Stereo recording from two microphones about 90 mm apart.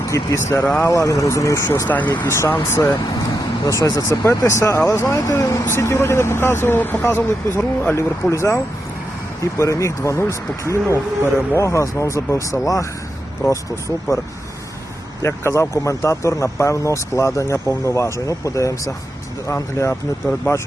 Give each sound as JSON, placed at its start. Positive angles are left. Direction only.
{"t": 0.1, "sound": "speech", "side_deg": 35}
{"t": 15.2, "sound": "speech", "side_deg": 30}